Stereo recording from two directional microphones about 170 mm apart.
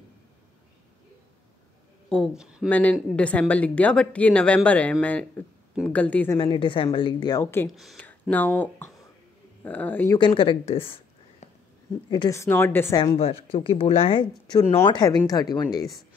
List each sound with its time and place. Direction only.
2.0 s speech: 5° left (ahead or behind)
2.7 s a woman's voice: 10° left (ahead or behind)
6.3 s a woman's voice: 30° left (ahead or behind)
7.7 s speech: centre (ahead or behind)
8.0 s speech: 10° left (ahead or behind)
10.1 s speech: 30° left (ahead or behind)
12.1 s a woman's voice: 20° left (ahead or behind)
13.0 s a woman's voice: 30° left (ahead or behind)